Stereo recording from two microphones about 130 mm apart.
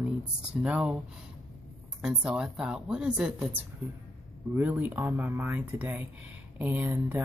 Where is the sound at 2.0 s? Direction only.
5° right (ahead or behind).